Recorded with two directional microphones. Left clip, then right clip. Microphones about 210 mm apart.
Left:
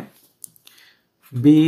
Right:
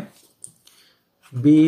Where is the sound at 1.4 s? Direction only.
50° left (ahead or behind).